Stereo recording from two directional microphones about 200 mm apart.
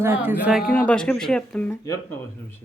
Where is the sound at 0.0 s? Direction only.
10° right (ahead or behind).